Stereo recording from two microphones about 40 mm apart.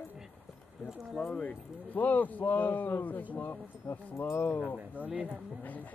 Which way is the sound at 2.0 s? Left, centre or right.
Left.